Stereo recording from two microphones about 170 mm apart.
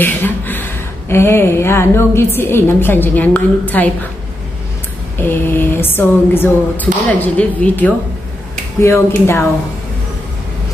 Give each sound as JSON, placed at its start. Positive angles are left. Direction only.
{"t": 0.0, "sound": "speech", "side_deg": 10}
{"t": 5.3, "sound": "speech", "side_deg": 10}